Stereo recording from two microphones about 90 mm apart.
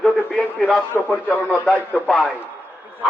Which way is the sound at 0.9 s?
20° left (ahead or behind).